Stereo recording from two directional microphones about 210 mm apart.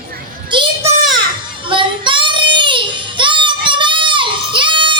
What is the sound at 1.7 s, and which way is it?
Child singing, 25° right (ahead or behind).